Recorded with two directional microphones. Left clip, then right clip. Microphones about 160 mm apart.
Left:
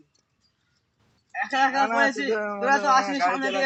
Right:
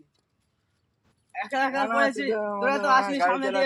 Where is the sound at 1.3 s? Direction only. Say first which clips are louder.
Left 3 dB; 40° right (ahead or behind).